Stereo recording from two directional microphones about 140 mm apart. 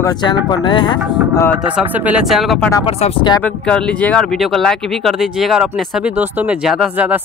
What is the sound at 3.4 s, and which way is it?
Speech, 5° left (ahead or behind).